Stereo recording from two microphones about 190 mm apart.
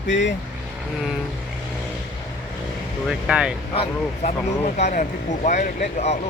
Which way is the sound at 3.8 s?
35° left (ahead or behind).